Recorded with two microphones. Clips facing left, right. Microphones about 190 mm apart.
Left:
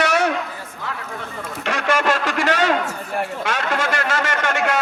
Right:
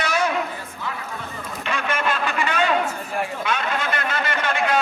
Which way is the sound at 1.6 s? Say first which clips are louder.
Left 5 dB; 85° left.